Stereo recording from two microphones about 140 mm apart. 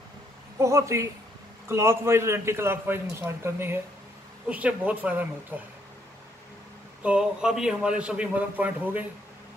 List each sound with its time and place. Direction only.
0.6 s a man's voice: 20° right (ahead or behind)
7.0 s a man's voice: 5° right (ahead or behind)